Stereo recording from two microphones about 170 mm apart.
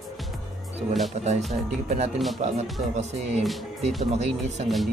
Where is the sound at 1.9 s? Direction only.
40° right (ahead or behind).